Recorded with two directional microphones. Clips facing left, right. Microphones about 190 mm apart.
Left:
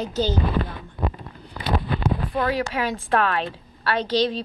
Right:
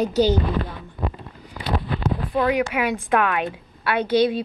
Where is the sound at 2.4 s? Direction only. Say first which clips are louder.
Right 5 dB; 15° right (ahead or behind).